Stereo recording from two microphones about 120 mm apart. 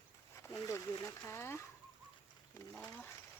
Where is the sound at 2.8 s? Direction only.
20° left (ahead or behind).